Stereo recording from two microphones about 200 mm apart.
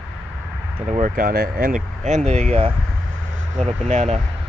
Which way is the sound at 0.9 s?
40° right (ahead or behind).